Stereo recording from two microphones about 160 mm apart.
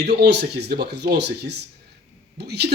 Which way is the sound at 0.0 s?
90° right.